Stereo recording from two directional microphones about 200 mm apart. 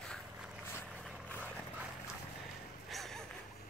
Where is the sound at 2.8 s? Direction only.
Centre (ahead or behind).